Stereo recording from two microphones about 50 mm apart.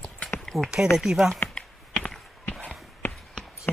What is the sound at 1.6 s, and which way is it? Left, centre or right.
Typing, centre.